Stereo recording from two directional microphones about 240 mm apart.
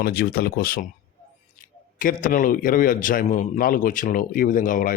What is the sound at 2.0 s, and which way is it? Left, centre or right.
A man's voice, left.